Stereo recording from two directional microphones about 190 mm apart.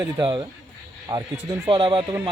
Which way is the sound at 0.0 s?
20° right (ahead or behind).